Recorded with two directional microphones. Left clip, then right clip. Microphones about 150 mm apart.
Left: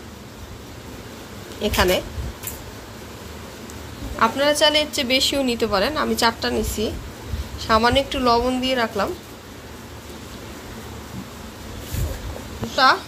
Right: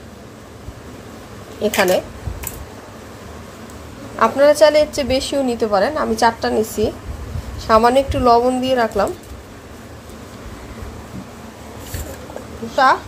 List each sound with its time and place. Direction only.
1.6 s a woman's voice: 30° right (ahead or behind)
4.2 s a woman's voice: 45° right (ahead or behind)